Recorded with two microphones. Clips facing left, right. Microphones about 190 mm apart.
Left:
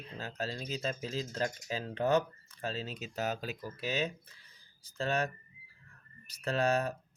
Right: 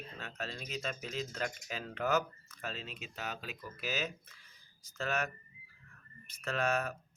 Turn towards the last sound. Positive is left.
turn(degrees=35)  # may be behind; listen again after turning